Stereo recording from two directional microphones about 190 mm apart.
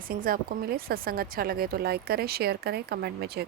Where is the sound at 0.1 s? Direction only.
50° right (ahead or behind).